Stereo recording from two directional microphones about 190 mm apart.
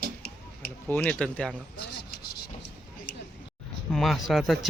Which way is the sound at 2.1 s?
55° left (ahead or behind).